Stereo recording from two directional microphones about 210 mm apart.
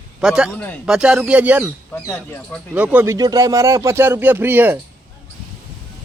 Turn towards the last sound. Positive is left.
turn(degrees=-10)  # may be behind; listen again after turning